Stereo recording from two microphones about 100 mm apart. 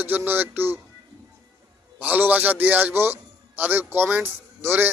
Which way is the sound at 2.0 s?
15° right (ahead or behind).